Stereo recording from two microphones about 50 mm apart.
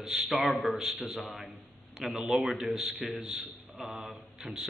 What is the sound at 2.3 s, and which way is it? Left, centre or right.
Speech, centre.